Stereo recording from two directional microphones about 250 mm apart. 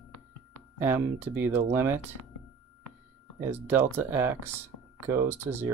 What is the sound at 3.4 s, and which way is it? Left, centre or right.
Speech, centre.